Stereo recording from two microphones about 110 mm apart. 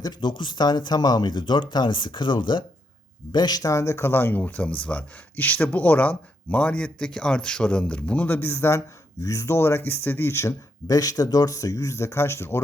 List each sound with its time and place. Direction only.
0.0 s speech: 40° left (ahead or behind); by 12.5 s 25° left (ahead or behind)